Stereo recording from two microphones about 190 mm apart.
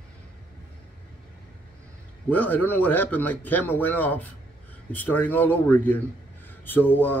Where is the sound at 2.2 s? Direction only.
10° left (ahead or behind).